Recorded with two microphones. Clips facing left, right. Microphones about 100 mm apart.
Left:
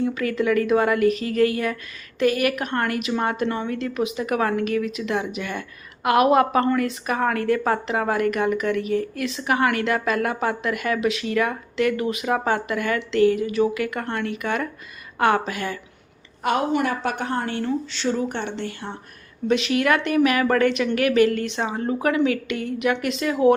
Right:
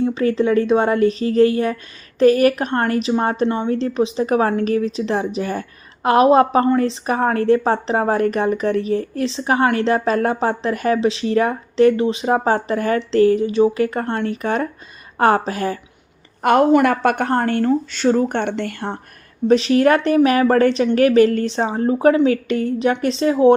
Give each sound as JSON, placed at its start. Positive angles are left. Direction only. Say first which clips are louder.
{"t": 0.0, "sound": "speech", "louder": "right 5 dB", "side_deg": -25}
{"t": 3.4, "sound": "speech", "louder": "right 6 dB", "side_deg": -20}
{"t": 16.4, "sound": "a woman's voice", "louder": "right 8 dB", "side_deg": -50}
{"t": 19.5, "sound": "speech", "louder": "right 6 dB", "side_deg": -35}